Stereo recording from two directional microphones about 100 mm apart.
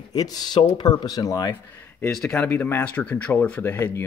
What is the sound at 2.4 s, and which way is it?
Speech, 20° left (ahead or behind).